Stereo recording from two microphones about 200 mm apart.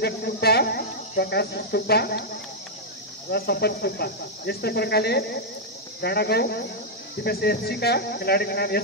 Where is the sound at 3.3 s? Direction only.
55° left (ahead or behind).